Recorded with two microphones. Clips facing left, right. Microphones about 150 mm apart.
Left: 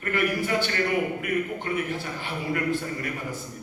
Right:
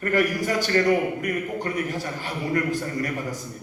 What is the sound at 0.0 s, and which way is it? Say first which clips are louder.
A man's voice: right 3 dB; 40° right (ahead or behind).